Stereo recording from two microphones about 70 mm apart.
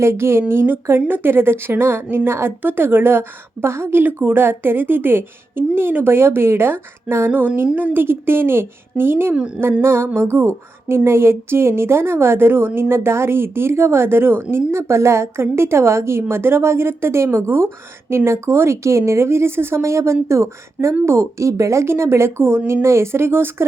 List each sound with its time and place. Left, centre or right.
0.0 s a woman's voice: right